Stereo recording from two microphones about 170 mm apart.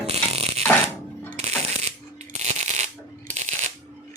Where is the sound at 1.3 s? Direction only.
40° right (ahead or behind).